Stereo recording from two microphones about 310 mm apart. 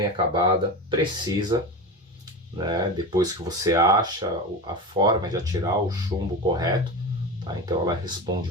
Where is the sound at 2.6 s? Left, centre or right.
Centre.